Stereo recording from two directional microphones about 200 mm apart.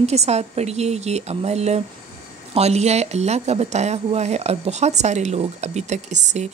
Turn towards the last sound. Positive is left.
turn(degrees=-35)  # may be behind; listen again after turning